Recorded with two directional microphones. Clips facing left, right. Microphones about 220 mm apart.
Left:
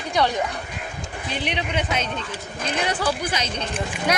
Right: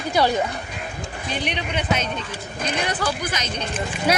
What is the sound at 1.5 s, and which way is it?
Speech, 25° left (ahead or behind).